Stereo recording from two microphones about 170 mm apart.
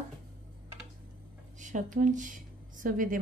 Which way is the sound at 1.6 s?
45° right (ahead or behind).